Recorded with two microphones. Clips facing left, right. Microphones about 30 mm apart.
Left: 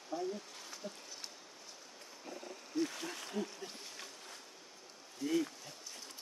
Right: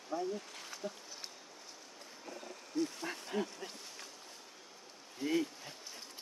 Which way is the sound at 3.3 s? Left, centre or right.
Right.